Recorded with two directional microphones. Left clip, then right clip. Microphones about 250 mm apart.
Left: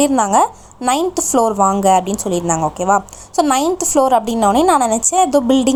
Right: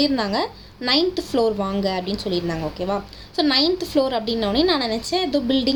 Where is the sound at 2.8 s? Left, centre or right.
Left.